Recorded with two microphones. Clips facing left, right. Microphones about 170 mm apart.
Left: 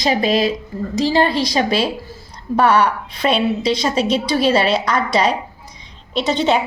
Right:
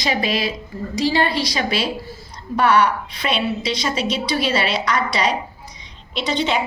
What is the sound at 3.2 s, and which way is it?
Speech, 40° left (ahead or behind).